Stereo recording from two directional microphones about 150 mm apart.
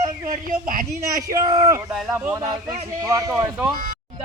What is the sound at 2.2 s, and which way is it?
A man's voice, 20° right (ahead or behind).